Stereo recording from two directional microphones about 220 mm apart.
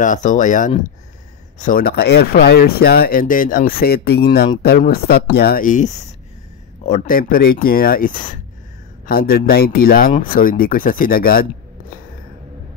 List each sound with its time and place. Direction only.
0.0 s speech: 35° left (ahead or behind)